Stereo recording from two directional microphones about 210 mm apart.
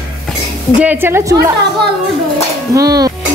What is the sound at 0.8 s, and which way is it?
Speech, 10° right (ahead or behind).